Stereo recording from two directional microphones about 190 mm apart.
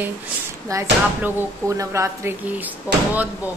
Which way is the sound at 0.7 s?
15° right (ahead or behind).